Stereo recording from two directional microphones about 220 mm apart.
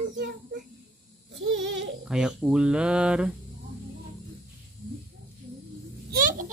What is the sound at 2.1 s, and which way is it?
Speech, centre (ahead or behind).